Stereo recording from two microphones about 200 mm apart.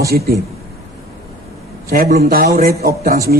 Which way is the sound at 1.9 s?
40° right (ahead or behind).